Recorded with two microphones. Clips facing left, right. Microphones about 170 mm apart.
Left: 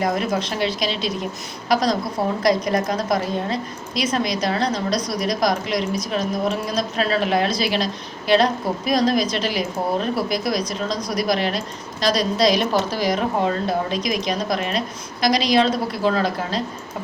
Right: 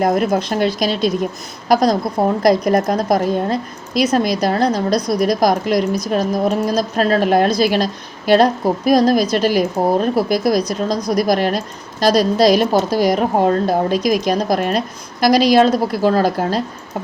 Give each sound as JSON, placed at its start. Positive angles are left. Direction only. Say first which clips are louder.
{"t": 0.0, "sound": "a woman's voice", "louder": "right 6 dB", "side_deg": -50}